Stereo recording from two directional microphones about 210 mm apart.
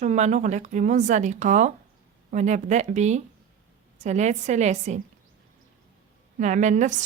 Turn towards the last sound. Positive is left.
turn(degrees=-35)  # may be behind; listen again after turning